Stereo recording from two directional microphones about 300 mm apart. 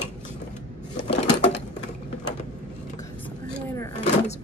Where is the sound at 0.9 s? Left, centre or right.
Left.